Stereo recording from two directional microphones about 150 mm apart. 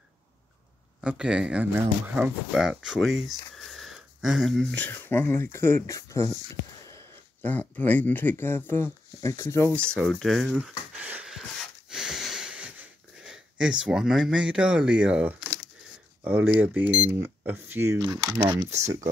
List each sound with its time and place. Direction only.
1.0 s speech: 5° right (ahead or behind); by 6.3 s 20° left (ahead or behind)
7.4 s speech: 10° left (ahead or behind)
9.8 s speech: 5° left (ahead or behind)
11.9 s wheeze: 5° right (ahead or behind)
16.3 s speech: 10° right (ahead or behind)